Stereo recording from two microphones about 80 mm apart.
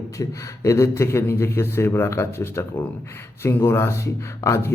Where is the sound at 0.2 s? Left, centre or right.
Left.